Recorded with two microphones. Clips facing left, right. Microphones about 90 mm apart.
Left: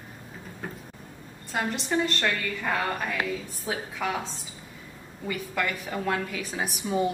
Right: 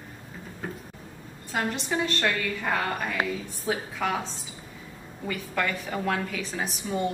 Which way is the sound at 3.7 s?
Centre (ahead or behind).